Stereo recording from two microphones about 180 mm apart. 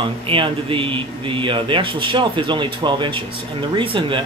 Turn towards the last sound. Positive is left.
turn(degrees=-30)  # may be behind; listen again after turning